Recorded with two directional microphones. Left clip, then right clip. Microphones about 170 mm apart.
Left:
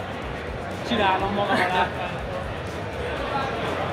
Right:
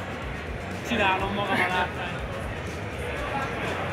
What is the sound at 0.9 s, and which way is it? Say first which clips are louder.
Speech: left 2 dB; 5° left (ahead or behind).